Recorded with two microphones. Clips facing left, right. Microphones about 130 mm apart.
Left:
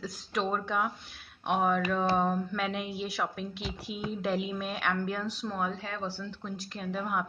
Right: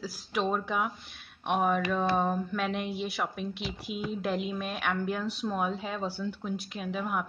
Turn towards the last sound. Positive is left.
turn(degrees=-5)  # may be behind; listen again after turning